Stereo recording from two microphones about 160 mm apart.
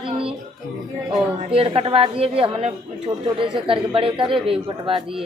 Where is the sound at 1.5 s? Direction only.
35° right (ahead or behind).